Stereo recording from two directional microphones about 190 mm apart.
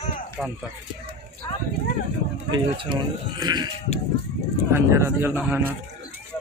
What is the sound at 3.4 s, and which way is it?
Sheep, 20° right (ahead or behind).